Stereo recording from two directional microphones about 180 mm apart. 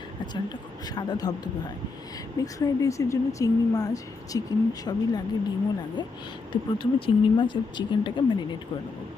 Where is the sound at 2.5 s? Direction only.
20° left (ahead or behind).